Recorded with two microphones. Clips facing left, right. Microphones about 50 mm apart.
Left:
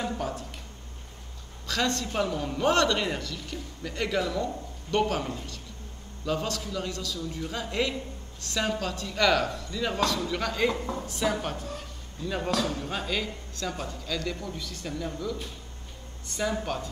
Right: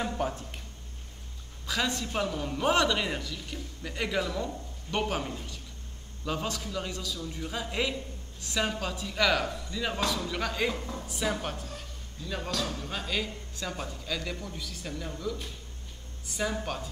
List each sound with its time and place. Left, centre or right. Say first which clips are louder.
0.2 s speech: right 1 dB; right
1.7 s a man's voice: left 2 dB; centre
6.2 s a man's voice: left 3 dB; centre
12.3 s a man's voice: left 5 dB; centre